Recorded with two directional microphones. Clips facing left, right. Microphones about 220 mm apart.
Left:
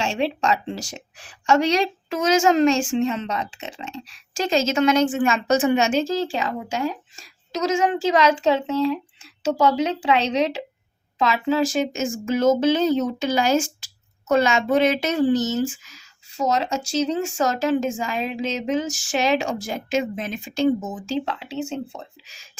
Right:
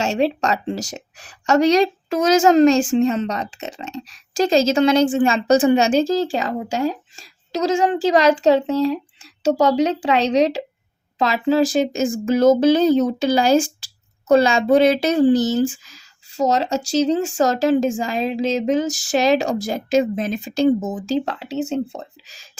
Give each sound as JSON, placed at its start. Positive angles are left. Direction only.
{"t": 0.0, "sound": "speech", "side_deg": -40}